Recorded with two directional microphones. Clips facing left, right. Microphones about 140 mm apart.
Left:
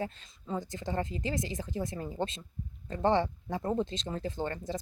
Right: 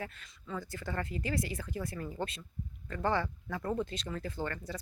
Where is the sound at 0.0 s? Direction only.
25° left (ahead or behind).